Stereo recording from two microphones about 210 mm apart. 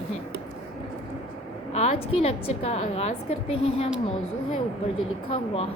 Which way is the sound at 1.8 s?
30° left (ahead or behind).